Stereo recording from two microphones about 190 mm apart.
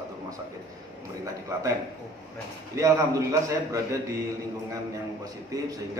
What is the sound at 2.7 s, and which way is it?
A man's voice, 15° right (ahead or behind).